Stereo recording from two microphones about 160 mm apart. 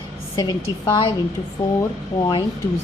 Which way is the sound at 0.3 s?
25° left (ahead or behind).